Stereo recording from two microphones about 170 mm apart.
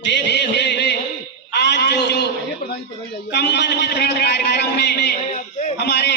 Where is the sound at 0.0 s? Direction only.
90° left.